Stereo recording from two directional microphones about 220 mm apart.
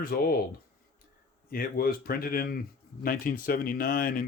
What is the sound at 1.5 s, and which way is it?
Speech, 40° left (ahead or behind).